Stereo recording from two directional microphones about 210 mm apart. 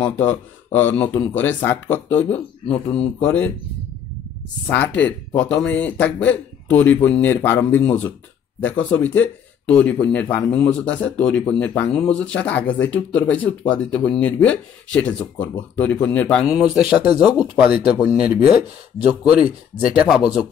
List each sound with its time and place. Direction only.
0.0 s speech: 10° left (ahead or behind)
4.6 s a man's voice: 10° left (ahead or behind)